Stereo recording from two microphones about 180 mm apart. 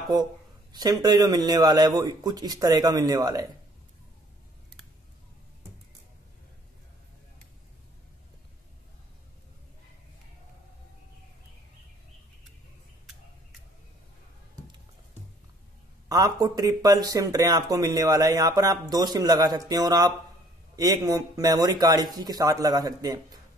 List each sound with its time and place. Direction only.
0.7 s speech: 20° right (ahead or behind)
16.1 s speech: 20° right (ahead or behind)